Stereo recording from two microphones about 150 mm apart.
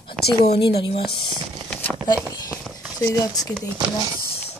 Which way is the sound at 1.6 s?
10° left (ahead or behind).